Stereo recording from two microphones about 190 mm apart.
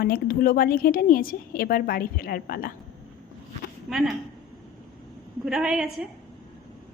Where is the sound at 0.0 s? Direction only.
50° left (ahead or behind).